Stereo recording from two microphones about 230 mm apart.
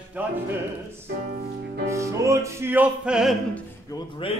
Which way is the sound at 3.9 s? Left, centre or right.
Left.